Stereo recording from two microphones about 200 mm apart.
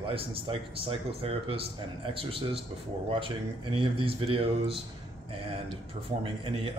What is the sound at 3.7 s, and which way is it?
Speech, 25° right (ahead or behind).